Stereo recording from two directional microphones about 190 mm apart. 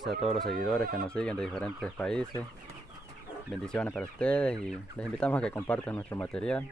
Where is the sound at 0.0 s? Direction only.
Centre (ahead or behind).